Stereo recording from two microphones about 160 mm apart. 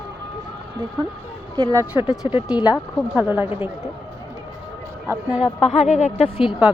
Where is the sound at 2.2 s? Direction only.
25° left (ahead or behind).